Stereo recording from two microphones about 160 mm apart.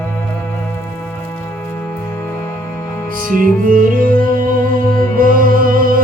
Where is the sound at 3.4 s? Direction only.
60° right (ahead or behind).